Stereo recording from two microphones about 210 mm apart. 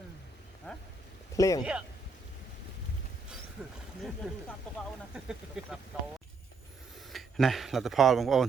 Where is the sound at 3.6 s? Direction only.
5° right (ahead or behind).